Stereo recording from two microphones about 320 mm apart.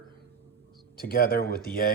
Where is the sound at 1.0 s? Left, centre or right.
Left.